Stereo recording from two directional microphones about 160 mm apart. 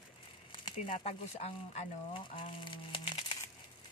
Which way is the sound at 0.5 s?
30° left (ahead or behind).